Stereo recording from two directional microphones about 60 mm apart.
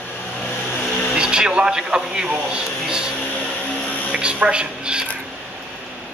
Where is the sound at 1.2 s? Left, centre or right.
Centre.